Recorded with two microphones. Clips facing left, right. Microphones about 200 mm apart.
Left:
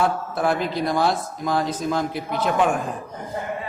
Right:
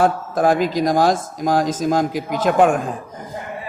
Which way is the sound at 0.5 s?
90° right.